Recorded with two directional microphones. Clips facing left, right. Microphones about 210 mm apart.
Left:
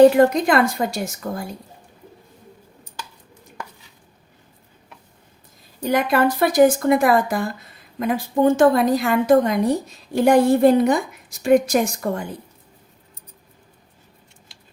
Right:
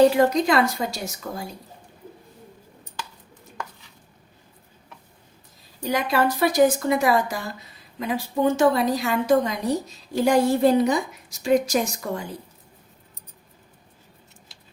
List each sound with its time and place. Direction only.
0.3 s speech: 50° left (ahead or behind)
5.8 s a woman's voice: 55° left (ahead or behind)